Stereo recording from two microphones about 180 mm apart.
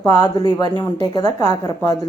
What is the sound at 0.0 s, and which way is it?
A woman's voice, 20° left (ahead or behind).